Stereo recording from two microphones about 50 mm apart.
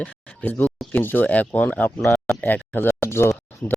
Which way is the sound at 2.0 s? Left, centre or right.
Centre.